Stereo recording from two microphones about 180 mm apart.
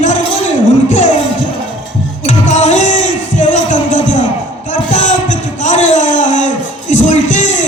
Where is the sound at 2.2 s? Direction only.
40° left (ahead or behind).